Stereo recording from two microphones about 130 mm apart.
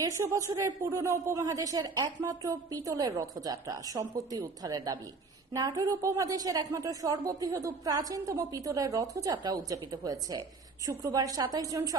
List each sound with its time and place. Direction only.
0.0 s speech: 25° right (ahead or behind)